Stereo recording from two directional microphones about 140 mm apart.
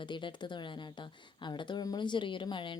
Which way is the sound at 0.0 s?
35° left (ahead or behind).